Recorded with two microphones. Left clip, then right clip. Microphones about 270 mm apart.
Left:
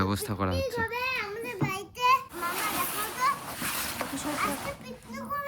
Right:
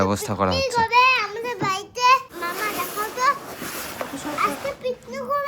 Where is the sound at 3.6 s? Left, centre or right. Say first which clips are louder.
Right 2 dB; left.